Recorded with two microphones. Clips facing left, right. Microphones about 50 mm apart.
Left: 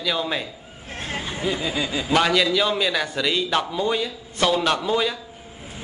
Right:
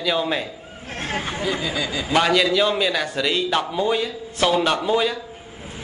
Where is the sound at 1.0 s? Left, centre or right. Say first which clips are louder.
Right 3 dB; right.